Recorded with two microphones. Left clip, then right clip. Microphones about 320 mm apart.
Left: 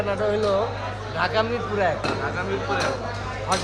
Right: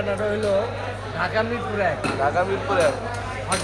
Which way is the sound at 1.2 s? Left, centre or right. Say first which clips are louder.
Left 1 dB; centre.